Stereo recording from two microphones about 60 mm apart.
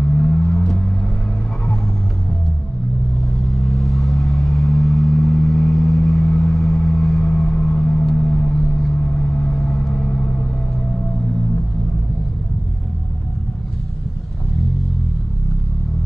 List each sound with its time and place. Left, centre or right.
0.1 s a sound: centre
3.3 s vehicle: centre
8.9 s vehicle: centre
9.9 s vehicle: centre